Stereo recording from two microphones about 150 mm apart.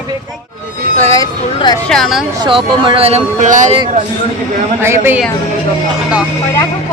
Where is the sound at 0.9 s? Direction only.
20° left (ahead or behind).